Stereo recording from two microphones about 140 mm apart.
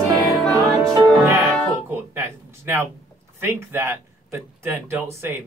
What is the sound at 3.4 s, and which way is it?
Speech, 15° right (ahead or behind).